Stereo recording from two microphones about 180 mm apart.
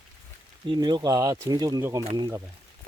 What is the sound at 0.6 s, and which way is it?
Speech, 25° right (ahead or behind).